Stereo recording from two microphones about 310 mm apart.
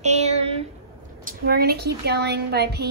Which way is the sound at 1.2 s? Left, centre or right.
Right.